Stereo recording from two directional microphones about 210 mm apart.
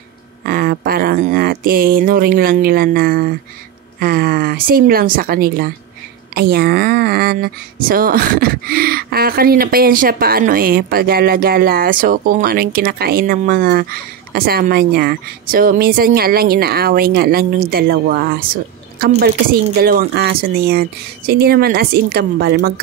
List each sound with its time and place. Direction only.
0.5 s speech: 45° right (ahead or behind)